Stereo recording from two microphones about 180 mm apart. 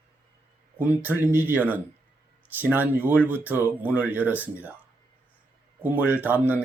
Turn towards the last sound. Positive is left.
turn(degrees=-10)  # may be behind; listen again after turning